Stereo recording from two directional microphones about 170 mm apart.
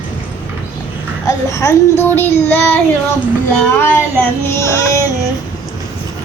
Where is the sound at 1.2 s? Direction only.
20° left (ahead or behind).